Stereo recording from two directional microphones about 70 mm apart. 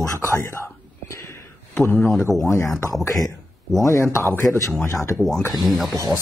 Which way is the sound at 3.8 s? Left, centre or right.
Left.